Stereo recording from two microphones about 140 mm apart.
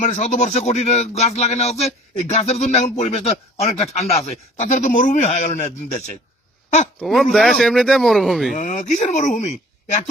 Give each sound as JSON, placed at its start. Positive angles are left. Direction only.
{"t": 0.0, "sound": "speech", "side_deg": 60}
{"t": 7.0, "sound": "speech", "side_deg": 0}
{"t": 8.5, "sound": "speech", "side_deg": 60}